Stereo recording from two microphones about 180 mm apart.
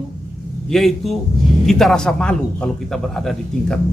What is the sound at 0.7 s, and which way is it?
A man's voice, centre (ahead or behind).